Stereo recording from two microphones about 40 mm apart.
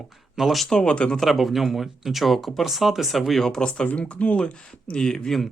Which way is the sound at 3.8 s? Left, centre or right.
Left.